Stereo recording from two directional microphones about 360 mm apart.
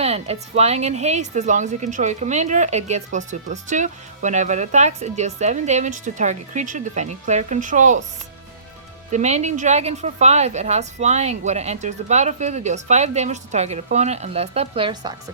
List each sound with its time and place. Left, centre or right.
0.0 s a woman's voice: centre
9.1 s a woman's voice: centre